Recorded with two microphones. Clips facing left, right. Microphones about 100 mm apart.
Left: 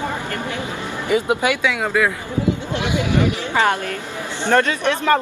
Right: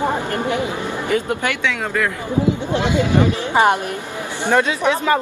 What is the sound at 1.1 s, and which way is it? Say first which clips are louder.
Speech: left 3 dB; 10° left (ahead or behind).